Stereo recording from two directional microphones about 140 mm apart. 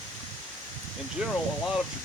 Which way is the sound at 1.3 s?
Centre (ahead or behind).